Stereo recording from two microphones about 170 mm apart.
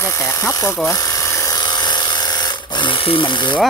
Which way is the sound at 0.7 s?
20° left (ahead or behind).